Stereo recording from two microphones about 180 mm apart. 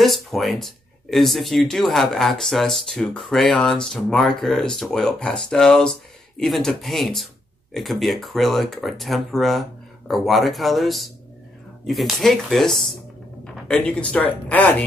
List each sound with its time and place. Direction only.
0.0 s speech: centre (ahead or behind)